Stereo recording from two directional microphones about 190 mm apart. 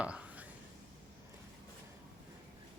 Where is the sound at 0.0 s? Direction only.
5° right (ahead or behind).